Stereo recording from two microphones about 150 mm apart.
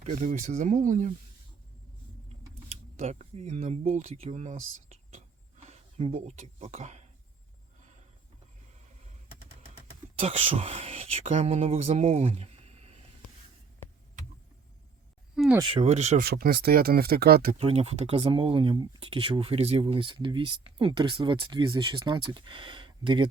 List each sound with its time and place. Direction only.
0.0 s speech: 45° right (ahead or behind)
3.0 s speech: 45° right (ahead or behind)
9.7 s speech: 40° right (ahead or behind)
15.4 s a sound: centre (ahead or behind)
15.7 s speech: 45° right (ahead or behind)
16.2 s speech: 90° right
17.6 s speech: 40° right (ahead or behind)